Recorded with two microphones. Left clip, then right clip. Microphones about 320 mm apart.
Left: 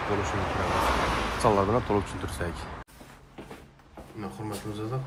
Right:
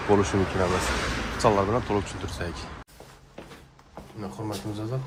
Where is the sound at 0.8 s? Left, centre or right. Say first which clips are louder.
Left 3 dB; centre.